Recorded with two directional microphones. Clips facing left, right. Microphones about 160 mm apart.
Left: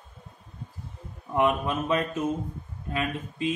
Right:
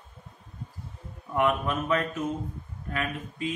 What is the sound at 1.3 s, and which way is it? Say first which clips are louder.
A man's voice: left 1 dB; 20° left (ahead or behind).